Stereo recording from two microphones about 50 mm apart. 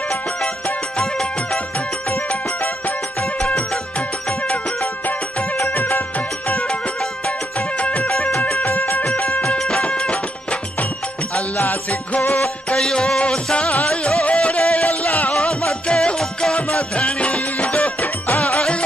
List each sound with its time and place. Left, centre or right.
0.9 s music: centre
5.7 s music: left
6.1 s music: left
8.1 s music: centre
8.6 s music: left
9.0 s music: left
9.6 s music: centre
9.8 s music: left
11.3 s music: left
12.7 s music: centre; by 15.3 s left
15.3 s music: centre
16.5 s music: left